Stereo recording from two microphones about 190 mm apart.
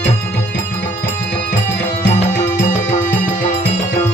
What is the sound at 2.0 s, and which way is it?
Music, 40° left (ahead or behind).